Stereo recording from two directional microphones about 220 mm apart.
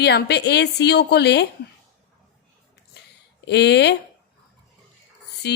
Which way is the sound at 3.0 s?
50° left (ahead or behind).